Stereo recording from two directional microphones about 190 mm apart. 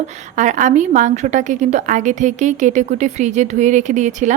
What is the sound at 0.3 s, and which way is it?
A woman's voice, 40° right (ahead or behind).